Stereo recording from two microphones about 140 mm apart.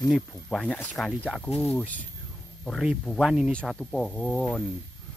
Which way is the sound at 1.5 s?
45° left (ahead or behind).